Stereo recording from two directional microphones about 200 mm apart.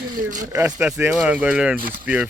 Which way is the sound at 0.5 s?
5° right (ahead or behind).